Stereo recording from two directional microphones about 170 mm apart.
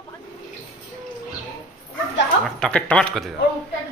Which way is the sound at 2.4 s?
5° left (ahead or behind).